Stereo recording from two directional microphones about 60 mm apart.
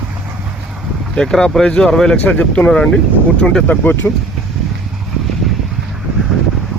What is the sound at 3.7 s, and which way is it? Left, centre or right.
Speech, left.